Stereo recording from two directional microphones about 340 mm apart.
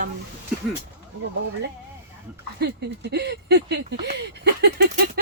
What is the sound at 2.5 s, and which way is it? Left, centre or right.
Speech, right.